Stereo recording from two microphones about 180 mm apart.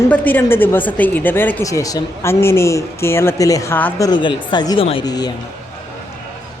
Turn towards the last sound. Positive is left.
turn(degrees=20)  # may be behind; listen again after turning